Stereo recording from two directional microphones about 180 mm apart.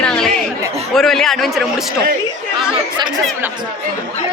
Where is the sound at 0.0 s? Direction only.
5° left (ahead or behind).